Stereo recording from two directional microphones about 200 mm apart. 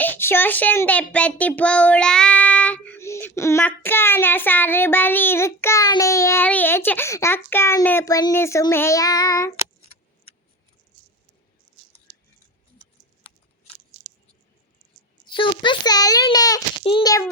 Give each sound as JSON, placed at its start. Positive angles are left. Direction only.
{"t": 0.0, "sound": "a child's voice", "side_deg": 10}
{"t": 15.3, "sound": "a child's voice", "side_deg": 25}